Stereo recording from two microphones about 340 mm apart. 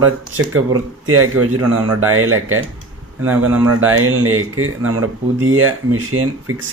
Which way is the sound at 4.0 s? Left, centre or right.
Right.